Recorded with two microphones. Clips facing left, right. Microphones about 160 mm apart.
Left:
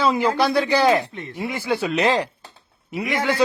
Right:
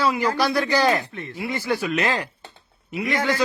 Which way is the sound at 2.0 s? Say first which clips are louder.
Left 5 dB; 35° left (ahead or behind).